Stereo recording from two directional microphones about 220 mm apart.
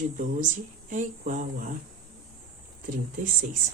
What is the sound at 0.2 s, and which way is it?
Speech, 35° right (ahead or behind).